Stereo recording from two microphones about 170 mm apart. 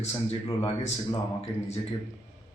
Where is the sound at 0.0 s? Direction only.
35° left (ahead or behind).